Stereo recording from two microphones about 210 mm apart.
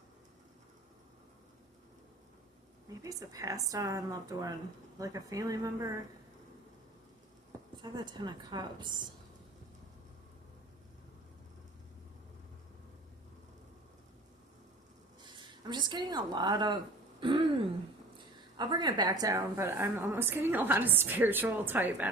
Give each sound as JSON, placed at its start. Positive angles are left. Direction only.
{"t": 3.0, "sound": "a woman's voice", "side_deg": -15}
{"t": 7.8, "sound": "a woman's voice", "side_deg": -20}
{"t": 15.2, "sound": "speech", "side_deg": -20}
{"t": 17.2, "sound": "throat clearing", "side_deg": -25}
{"t": 18.5, "sound": "a woman's voice", "side_deg": -20}